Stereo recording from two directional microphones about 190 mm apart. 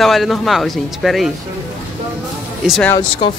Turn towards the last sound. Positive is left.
turn(degrees=25)  # may be behind; listen again after turning